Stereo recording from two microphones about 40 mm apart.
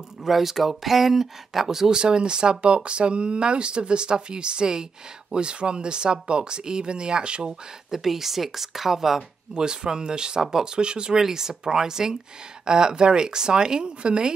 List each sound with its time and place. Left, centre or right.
0.2 s speech: centre; by 7.5 s right
7.9 s speech: centre
9.5 s speech: centre
11.1 s speech: centre